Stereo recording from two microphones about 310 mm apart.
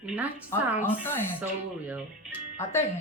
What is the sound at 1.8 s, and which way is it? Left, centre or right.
Speech, centre.